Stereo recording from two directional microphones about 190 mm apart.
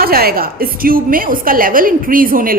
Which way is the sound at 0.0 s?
50° right (ahead or behind).